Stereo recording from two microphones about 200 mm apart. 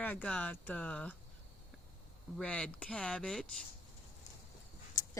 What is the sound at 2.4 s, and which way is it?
Speech, 5° left (ahead or behind).